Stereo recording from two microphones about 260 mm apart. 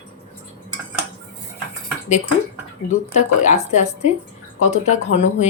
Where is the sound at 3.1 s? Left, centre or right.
Left.